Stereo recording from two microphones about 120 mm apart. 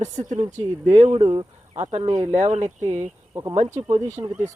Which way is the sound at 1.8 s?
70° right (ahead or behind).